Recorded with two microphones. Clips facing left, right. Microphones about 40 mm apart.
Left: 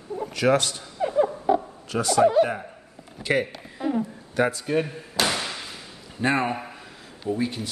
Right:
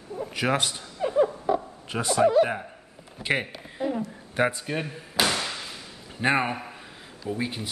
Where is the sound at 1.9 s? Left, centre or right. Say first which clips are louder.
Left 3 dB; right.